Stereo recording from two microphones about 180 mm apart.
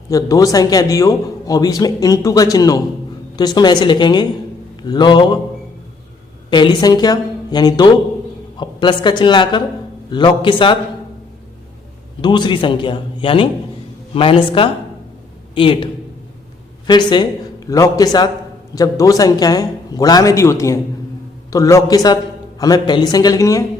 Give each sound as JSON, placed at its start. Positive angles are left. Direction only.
{"t": 0.1, "sound": "a man's voice", "side_deg": 20}
{"t": 6.5, "sound": "a man's voice", "side_deg": 25}
{"t": 12.2, "sound": "a man's voice", "side_deg": 25}